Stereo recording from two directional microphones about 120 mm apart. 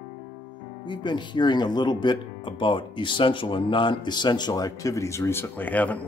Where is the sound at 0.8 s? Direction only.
40° left (ahead or behind).